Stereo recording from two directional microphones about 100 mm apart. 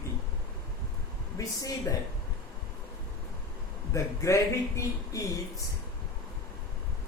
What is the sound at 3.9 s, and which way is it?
Speech, 30° left (ahead or behind).